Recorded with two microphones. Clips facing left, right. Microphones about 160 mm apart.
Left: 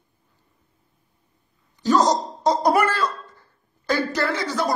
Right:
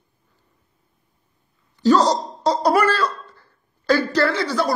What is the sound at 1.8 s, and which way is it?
Speech, 15° left (ahead or behind).